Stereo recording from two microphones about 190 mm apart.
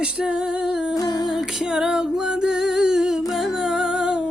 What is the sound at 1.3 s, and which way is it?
Music, centre (ahead or behind).